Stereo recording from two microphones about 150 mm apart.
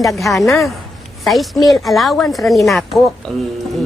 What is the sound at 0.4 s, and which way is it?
Speech, centre (ahead or behind).